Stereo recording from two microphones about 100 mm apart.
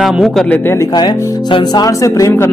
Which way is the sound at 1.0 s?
50° left (ahead or behind).